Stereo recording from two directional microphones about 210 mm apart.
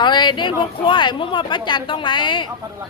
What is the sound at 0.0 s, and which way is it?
Speech, 20° left (ahead or behind).